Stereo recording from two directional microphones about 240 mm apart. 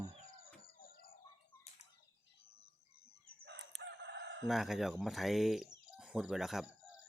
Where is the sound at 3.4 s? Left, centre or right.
Right.